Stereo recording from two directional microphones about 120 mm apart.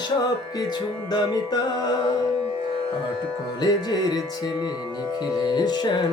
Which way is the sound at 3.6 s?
35° left (ahead or behind).